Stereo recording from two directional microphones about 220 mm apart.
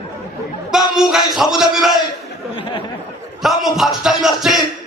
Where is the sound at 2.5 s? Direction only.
25° left (ahead or behind).